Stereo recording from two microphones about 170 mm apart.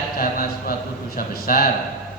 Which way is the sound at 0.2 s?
60° left (ahead or behind).